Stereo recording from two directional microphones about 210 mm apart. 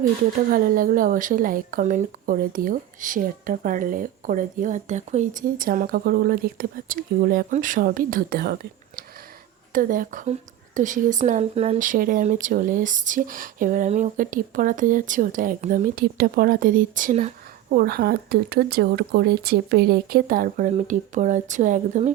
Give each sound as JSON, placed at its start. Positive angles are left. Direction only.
{"t": 0.5, "sound": "a woman's voice", "side_deg": -40}
{"t": 9.7, "sound": "a woman's voice", "side_deg": -40}
{"t": 17.7, "sound": "speech", "side_deg": -45}